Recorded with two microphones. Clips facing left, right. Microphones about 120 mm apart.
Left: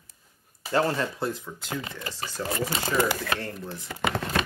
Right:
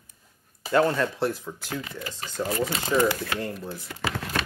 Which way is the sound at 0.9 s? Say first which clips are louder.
Right 3 dB; centre (ahead or behind).